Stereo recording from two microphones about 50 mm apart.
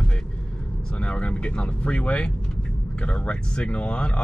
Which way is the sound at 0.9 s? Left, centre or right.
Left.